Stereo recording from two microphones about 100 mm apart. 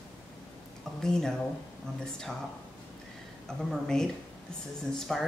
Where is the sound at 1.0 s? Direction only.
5° left (ahead or behind).